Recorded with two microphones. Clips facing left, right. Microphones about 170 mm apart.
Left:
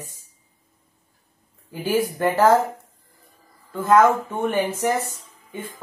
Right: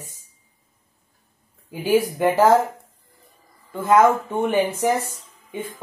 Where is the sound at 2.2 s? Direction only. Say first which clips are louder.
Even; 10° right (ahead or behind).